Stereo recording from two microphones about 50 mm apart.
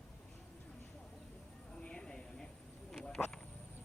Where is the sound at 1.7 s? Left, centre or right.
Centre.